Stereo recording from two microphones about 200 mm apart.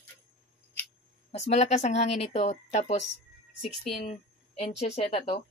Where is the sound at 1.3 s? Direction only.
35° left (ahead or behind).